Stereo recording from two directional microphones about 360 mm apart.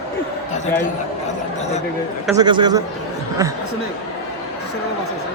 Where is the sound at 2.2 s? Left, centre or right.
Centre.